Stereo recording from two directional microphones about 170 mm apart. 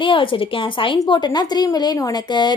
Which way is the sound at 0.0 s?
30° left (ahead or behind).